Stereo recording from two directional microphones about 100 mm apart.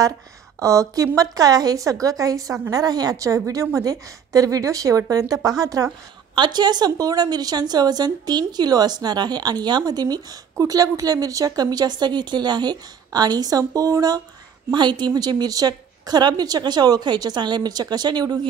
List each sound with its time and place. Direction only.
0.6 s a woman's voice: 30° right (ahead or behind)
6.3 s a woman's voice: 50° right (ahead or behind)